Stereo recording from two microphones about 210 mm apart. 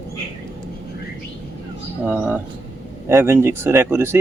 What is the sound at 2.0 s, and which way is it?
Speech, 5° right (ahead or behind).